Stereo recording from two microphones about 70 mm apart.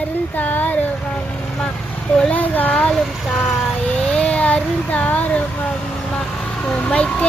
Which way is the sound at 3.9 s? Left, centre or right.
Centre.